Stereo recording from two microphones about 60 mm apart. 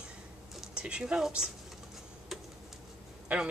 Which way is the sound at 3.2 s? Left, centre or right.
Centre.